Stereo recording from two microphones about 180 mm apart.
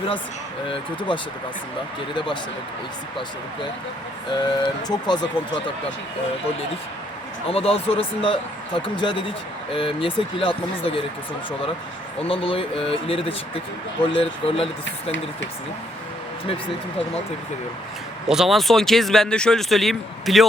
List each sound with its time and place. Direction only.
0.7 s speech: 25° left (ahead or behind)
4.3 s speech: 25° left (ahead or behind)
7.5 s speech: 30° left (ahead or behind)
12.3 s speech: 30° left (ahead or behind)
18.3 s speech: centre (ahead or behind)